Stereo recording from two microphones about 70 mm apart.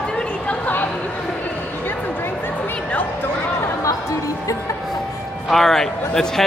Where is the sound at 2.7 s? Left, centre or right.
Centre.